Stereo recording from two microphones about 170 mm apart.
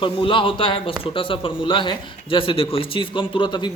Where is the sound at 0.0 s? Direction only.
30° left (ahead or behind).